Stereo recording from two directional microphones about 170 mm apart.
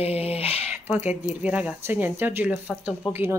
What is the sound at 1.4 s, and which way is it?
Speech, 10° right (ahead or behind).